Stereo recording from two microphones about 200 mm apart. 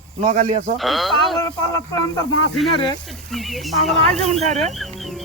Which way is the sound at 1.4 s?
20° left (ahead or behind).